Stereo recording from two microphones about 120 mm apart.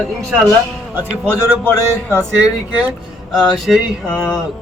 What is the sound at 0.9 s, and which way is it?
Speech, 15° right (ahead or behind).